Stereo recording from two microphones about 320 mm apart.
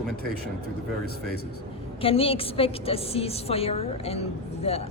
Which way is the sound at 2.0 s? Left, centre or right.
Centre.